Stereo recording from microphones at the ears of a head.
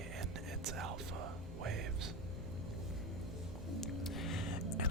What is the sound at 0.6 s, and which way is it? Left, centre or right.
Music, right.